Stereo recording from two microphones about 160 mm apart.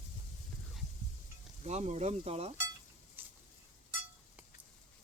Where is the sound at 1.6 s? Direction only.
45° right (ahead or behind).